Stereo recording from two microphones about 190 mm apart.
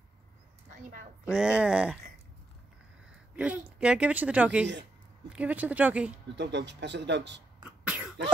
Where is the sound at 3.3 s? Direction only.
5° right (ahead or behind).